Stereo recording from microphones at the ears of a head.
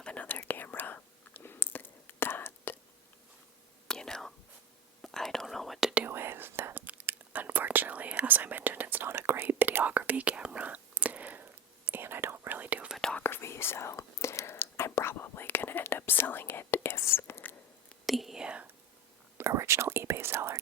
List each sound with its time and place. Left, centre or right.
0.3 s whispering: left
2.0 s whispering: left
4.0 s whispering: centre
5.9 s whispering: right
13.2 s whispering: left
19.4 s whispering: right